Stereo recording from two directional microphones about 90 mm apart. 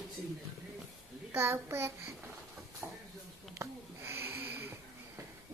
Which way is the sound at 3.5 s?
30° right (ahead or behind).